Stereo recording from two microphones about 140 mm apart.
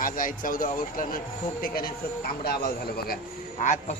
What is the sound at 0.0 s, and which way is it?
Speech, 80° left.